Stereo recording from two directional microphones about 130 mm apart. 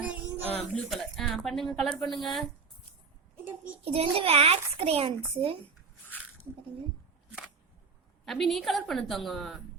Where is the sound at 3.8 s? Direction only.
45° right (ahead or behind).